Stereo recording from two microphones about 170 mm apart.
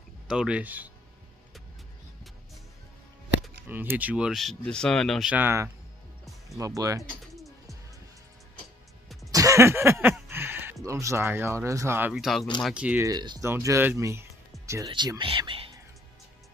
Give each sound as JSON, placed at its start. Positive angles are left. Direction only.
{"t": 0.3, "sound": "speech", "side_deg": -5}
{"t": 3.6, "sound": "speech", "side_deg": -10}
{"t": 5.3, "sound": "speech", "side_deg": -15}
{"t": 7.0, "sound": "pigeon", "side_deg": 0}
{"t": 9.3, "sound": "a sound", "side_deg": -20}
{"t": 10.3, "sound": "speech", "side_deg": -15}
{"t": 13.0, "sound": "speech", "side_deg": -25}
{"t": 14.9, "sound": "speech", "side_deg": -25}